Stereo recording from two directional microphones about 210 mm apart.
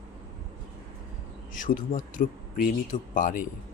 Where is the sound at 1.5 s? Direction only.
40° left (ahead or behind).